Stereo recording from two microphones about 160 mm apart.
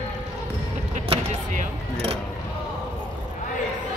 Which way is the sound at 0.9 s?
50° right (ahead or behind).